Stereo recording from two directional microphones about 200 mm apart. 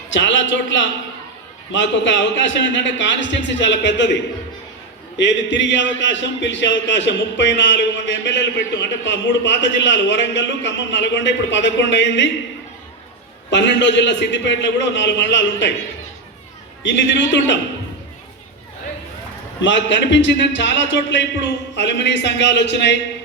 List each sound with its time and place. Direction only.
0.1 s a man's voice: 65° left (ahead or behind)
13.5 s a man's voice: 60° left (ahead or behind)
16.8 s a man's voice: 65° left (ahead or behind)
19.6 s a man's voice: 65° left (ahead or behind)